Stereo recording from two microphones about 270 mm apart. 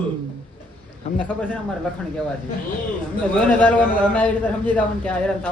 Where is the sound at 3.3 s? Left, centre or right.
Centre.